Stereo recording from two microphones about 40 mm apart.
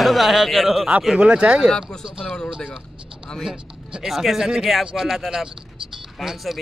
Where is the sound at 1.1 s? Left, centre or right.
Right.